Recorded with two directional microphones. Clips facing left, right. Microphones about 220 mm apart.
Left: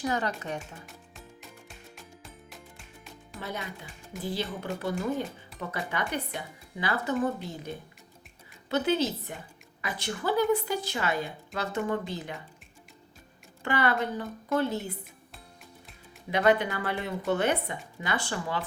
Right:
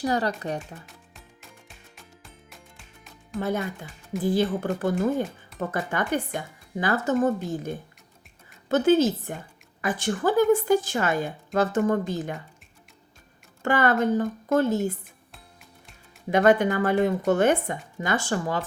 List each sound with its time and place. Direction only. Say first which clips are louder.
0.0 s speech: right 5 dB; 35° right (ahead or behind)
0.6 s music: right 2 dB; centre (ahead or behind)
3.3 s a woman's voice: right 10 dB; 50° right (ahead or behind)
13.6 s a woman's voice: right 5 dB; 45° right (ahead or behind)
16.3 s a woman's voice: right 5 dB; 45° right (ahead or behind)